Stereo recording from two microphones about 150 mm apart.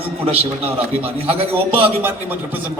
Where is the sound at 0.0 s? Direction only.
40° right (ahead or behind).